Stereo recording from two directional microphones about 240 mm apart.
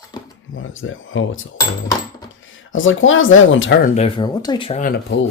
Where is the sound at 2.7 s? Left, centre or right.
Left.